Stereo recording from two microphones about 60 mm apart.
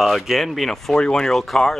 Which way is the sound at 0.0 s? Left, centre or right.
Centre.